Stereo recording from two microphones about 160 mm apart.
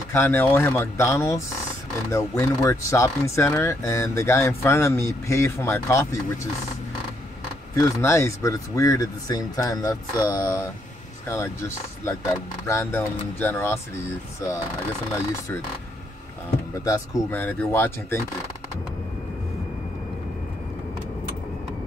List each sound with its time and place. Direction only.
0.1 s speech: 15° left (ahead or behind)
7.7 s speech: 20° left (ahead or behind)
16.8 s speech: 15° left (ahead or behind)